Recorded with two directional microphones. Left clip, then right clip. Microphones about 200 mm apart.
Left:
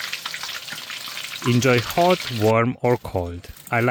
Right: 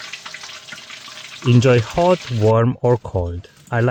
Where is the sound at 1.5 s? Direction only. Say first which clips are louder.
Right 4 dB; 40° left (ahead or behind).